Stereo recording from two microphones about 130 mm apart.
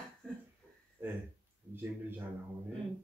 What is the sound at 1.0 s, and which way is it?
Speech, 15° right (ahead or behind).